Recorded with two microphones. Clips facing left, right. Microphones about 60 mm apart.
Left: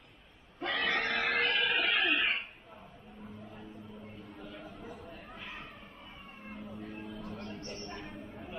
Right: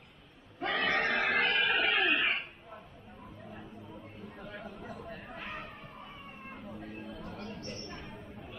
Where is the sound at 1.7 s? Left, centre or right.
Centre.